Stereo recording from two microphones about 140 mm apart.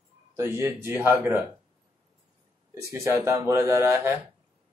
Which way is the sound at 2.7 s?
20° right (ahead or behind).